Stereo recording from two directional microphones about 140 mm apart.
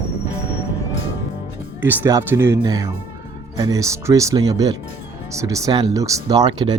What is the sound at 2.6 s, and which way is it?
Speech, 30° right (ahead or behind).